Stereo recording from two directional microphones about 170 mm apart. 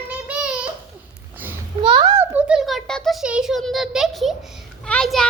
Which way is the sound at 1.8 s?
30° right (ahead or behind).